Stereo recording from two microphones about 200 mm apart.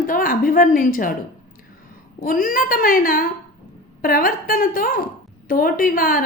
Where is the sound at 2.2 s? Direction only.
45° left (ahead or behind).